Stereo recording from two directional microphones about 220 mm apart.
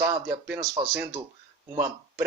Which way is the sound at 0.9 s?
10° right (ahead or behind).